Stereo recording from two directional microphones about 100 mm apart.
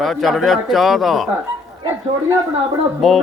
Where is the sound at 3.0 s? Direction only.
Centre (ahead or behind).